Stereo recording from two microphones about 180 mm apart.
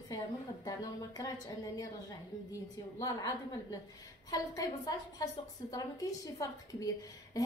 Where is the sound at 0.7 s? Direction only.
20° left (ahead or behind).